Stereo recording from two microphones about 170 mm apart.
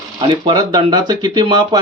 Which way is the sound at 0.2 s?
25° right (ahead or behind).